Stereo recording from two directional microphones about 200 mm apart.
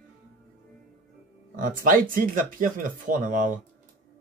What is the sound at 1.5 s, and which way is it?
Speech, 40° right (ahead or behind).